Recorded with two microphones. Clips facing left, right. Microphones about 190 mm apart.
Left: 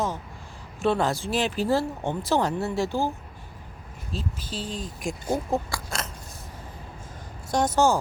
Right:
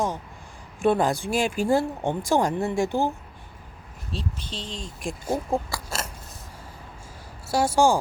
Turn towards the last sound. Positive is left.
turn(degrees=-10)  # may be behind; listen again after turning